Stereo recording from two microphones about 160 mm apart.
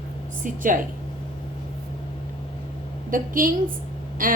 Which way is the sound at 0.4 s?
55° right (ahead or behind).